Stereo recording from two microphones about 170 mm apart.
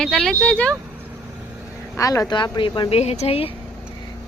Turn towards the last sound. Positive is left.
turn(degrees=35)  # may be behind; listen again after turning